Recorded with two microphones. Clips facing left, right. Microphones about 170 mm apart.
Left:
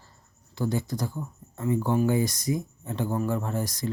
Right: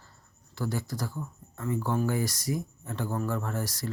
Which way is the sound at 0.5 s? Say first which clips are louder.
Left 4 dB; 20° left (ahead or behind).